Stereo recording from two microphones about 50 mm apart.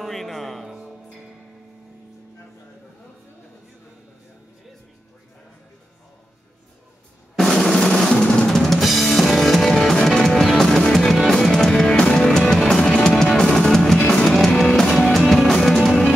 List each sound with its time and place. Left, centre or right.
0.0 s music: centre
0.7 s music: centre
7.3 s drum: centre
8.1 s drum: centre
8.5 s drum kit: centre
12.6 s music: centre
14.9 s music: centre